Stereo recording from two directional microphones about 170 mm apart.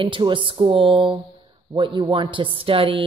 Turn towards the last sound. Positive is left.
turn(degrees=-30)  # may be behind; listen again after turning